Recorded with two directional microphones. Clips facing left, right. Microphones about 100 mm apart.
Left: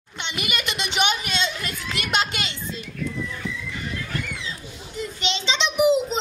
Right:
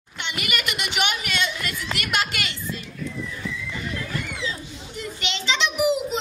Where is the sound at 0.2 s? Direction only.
20° left (ahead or behind).